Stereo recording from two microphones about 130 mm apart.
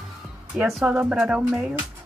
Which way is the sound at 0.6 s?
5° right (ahead or behind).